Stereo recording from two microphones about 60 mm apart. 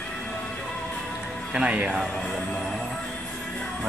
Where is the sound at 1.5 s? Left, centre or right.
Centre.